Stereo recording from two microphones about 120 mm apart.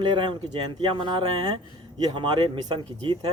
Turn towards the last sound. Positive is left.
turn(degrees=-40)  # may be behind; listen again after turning